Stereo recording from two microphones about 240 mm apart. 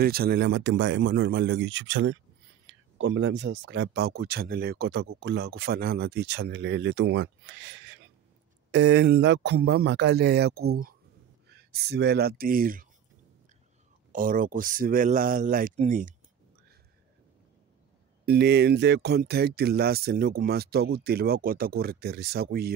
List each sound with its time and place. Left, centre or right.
0.0 s speech: right
14.1 s speech: right
18.2 s speech: right